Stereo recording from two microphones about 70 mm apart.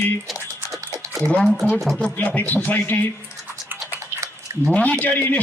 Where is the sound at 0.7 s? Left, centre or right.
Right.